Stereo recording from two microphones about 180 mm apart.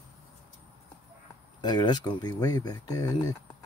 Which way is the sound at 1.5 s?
25° left (ahead or behind).